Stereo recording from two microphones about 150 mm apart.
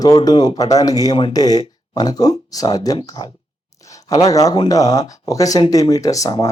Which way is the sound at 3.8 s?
20° left (ahead or behind).